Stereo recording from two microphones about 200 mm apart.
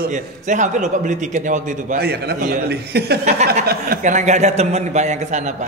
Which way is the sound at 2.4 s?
40° right (ahead or behind).